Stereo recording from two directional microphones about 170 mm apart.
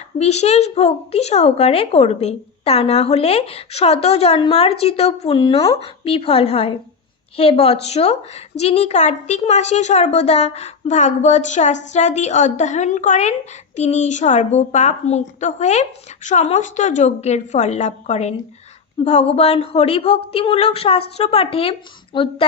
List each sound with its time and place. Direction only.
0.2 s a woman's voice: 40° left (ahead or behind)